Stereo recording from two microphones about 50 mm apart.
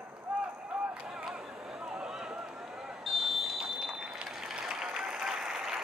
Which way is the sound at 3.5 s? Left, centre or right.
Centre.